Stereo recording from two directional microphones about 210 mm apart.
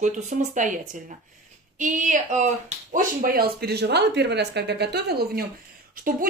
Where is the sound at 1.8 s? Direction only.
35° right (ahead or behind).